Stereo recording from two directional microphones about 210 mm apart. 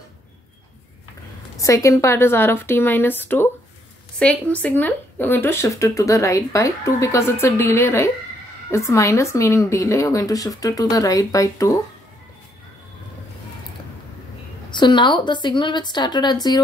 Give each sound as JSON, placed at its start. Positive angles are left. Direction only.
{"t": 1.6, "sound": "speech", "side_deg": 15}
{"t": 14.7, "sound": "a woman's voice", "side_deg": 20}